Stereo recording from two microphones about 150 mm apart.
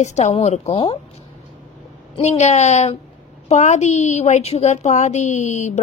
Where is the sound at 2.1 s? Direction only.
50° left (ahead or behind).